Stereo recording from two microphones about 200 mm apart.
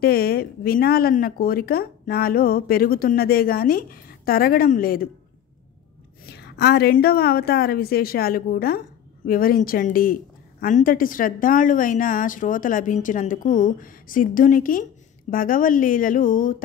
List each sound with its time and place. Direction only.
0.0 s speech: 50° left (ahead or behind)
6.3 s speech: 55° left (ahead or behind)